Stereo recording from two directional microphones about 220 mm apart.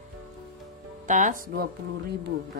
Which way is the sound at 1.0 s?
35° right (ahead or behind).